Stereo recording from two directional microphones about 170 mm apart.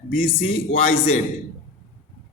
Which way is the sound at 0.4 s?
35° left (ahead or behind).